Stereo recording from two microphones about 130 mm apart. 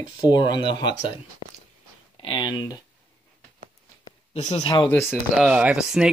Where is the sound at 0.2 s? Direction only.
35° left (ahead or behind).